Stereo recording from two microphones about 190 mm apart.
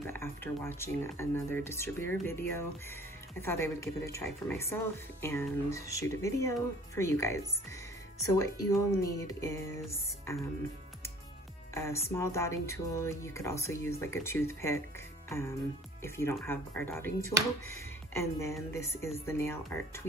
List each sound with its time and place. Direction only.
0.0 s speech: 10° left (ahead or behind)
11.7 s speech: 15° left (ahead or behind)
15.2 s music: 15° left (ahead or behind)
16.0 s speech: 15° left (ahead or behind)